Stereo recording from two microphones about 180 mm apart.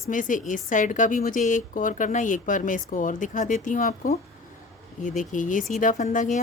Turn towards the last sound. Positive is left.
turn(degrees=45)  # may be behind; listen again after turning